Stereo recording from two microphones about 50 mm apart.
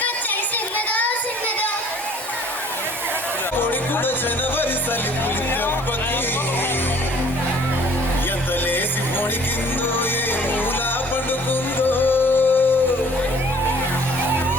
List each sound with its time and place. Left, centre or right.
11.8 s music: left